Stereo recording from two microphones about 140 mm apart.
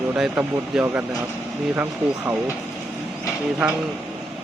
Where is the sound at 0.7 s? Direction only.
5° right (ahead or behind).